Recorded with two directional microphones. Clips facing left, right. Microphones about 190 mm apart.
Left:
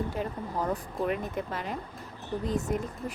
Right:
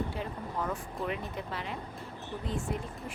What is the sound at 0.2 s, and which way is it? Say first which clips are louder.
Speech: left 4 dB; 40° left (ahead or behind).